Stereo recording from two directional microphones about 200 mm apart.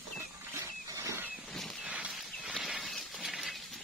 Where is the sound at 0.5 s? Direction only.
15° right (ahead or behind).